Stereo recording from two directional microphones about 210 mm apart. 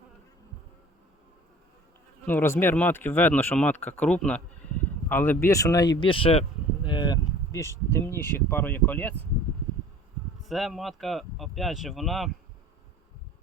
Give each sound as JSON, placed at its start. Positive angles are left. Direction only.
{"t": 2.2, "sound": "speech", "side_deg": 10}
{"t": 6.8, "sound": "a sound", "side_deg": 20}
{"t": 7.9, "sound": "speech", "side_deg": 10}
{"t": 10.5, "sound": "speech", "side_deg": 0}